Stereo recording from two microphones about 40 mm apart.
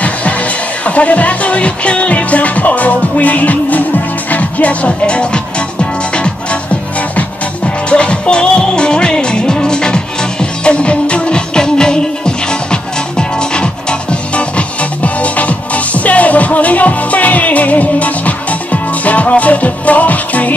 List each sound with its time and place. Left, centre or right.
0.8 s music: left; by 12.4 s centre
13.4 s music: left
15.0 s music: left